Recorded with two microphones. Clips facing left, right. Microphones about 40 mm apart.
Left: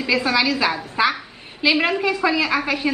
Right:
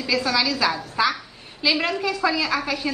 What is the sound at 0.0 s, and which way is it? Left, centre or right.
A woman's voice, left.